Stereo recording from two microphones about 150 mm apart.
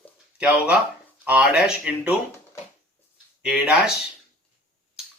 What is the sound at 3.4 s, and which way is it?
Speech, 5° right (ahead or behind).